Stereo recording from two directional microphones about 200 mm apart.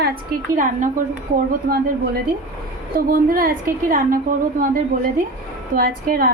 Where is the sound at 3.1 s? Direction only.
45° right (ahead or behind).